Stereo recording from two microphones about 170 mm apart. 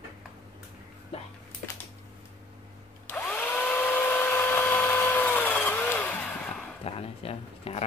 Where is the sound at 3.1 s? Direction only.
10° left (ahead or behind).